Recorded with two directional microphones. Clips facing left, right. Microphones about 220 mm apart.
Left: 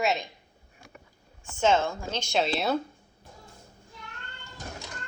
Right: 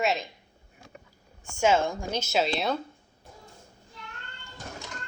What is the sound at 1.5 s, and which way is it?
Speech, 10° right (ahead or behind).